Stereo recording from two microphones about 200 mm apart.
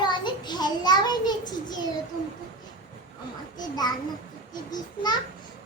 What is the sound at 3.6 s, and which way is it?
A child's voice, 20° left (ahead or behind).